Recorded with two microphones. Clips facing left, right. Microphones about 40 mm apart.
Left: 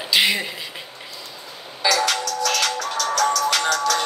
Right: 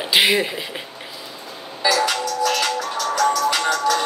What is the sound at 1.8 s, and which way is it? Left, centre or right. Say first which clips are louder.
Music: right 1 dB; left.